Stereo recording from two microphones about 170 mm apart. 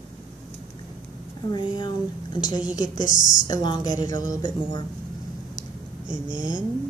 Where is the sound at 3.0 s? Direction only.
50° left (ahead or behind).